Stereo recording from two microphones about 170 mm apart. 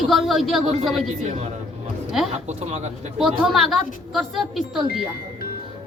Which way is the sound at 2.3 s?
40° right (ahead or behind).